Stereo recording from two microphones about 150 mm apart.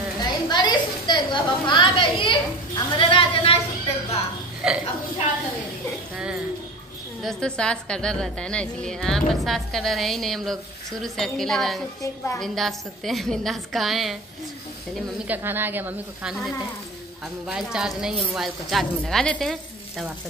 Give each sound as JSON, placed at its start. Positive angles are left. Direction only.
{"t": 0.2, "sound": "a sound", "side_deg": 30}
{"t": 4.6, "sound": "a woman's voice", "side_deg": -5}
{"t": 6.1, "sound": "music", "side_deg": -5}
{"t": 7.2, "sound": "a woman's voice", "side_deg": 5}
{"t": 15.2, "sound": "a woman's voice", "side_deg": -15}